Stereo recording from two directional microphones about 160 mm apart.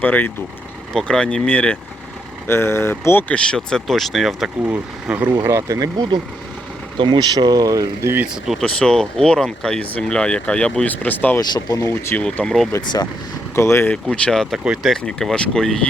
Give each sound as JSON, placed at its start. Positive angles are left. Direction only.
{"t": 0.0, "sound": "speech", "side_deg": 10}
{"t": 8.4, "sound": "speech", "side_deg": 5}
{"t": 11.3, "sound": "speech", "side_deg": 20}
{"t": 12.7, "sound": "speech", "side_deg": 25}
{"t": 13.9, "sound": "speech", "side_deg": 5}